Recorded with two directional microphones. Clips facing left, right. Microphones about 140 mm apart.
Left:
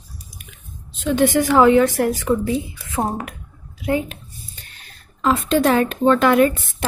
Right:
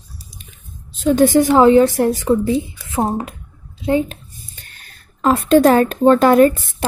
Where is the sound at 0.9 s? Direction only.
40° right (ahead or behind).